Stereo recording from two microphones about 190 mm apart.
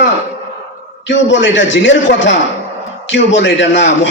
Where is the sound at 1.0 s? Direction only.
75° left (ahead or behind).